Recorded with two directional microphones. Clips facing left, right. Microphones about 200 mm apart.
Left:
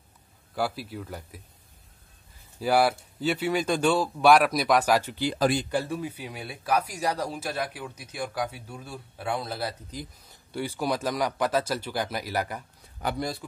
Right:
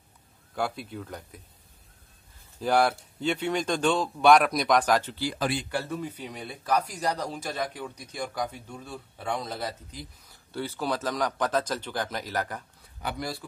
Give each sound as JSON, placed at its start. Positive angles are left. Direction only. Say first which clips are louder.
{"t": 0.6, "sound": "speech", "louder": "left 1 dB", "side_deg": 5}
{"t": 2.6, "sound": "speech", "louder": "left 1 dB", "side_deg": 5}
{"t": 5.3, "sound": "speech", "louder": "left 6 dB", "side_deg": 40}
{"t": 5.7, "sound": "speech", "louder": "left 3 dB", "side_deg": 15}
{"t": 13.0, "sound": "speech", "louder": "left 4 dB", "side_deg": 50}